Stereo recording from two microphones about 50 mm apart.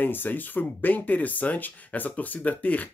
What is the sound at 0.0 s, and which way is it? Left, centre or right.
Speech, left.